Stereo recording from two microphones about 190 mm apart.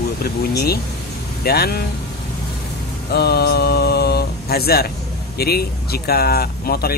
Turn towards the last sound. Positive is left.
turn(degrees=55)  # may be behind; listen again after turning